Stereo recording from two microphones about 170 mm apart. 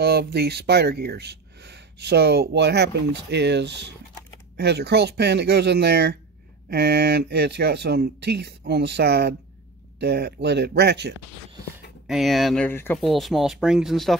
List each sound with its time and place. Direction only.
0.0 s speech: 70° right (ahead or behind); by 3.9 s 90° right
4.6 s speech: 80° right
12.1 s speech: centre (ahead or behind)
12.6 s speech: 10° left (ahead or behind)
13.0 s speech: centre (ahead or behind)